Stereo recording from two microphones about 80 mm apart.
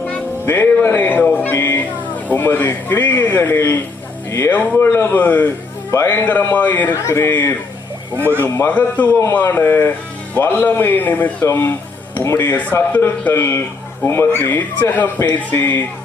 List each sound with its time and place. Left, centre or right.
0.4 s a man's voice: left
7.1 s speech: left
8.7 s a man's voice: left
12.9 s a man's voice: left